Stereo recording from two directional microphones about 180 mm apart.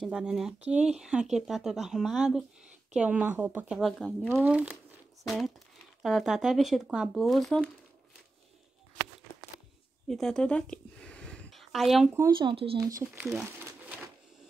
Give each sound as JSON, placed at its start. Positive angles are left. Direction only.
{"t": 0.0, "sound": "a woman's voice", "side_deg": -5}
{"t": 4.3, "sound": "a woman's voice", "side_deg": -10}
{"t": 10.0, "sound": "a sound", "side_deg": 0}
{"t": 12.4, "sound": "speech", "side_deg": -30}
{"t": 12.8, "sound": "a woman's voice", "side_deg": -15}
{"t": 13.3, "sound": "crumpling", "side_deg": -5}